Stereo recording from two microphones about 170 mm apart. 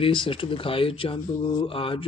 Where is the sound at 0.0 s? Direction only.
30° left (ahead or behind).